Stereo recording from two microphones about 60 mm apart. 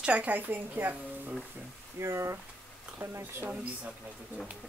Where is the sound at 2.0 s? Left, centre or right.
Right.